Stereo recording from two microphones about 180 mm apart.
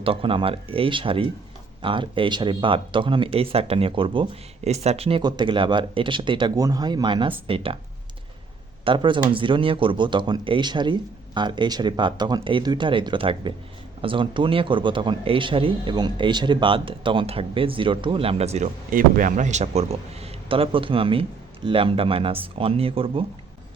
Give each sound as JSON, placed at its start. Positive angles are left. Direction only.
{"t": 0.0, "sound": "speech", "side_deg": -30}
{"t": 8.8, "sound": "speech", "side_deg": -25}
{"t": 18.9, "sound": "speech", "side_deg": -50}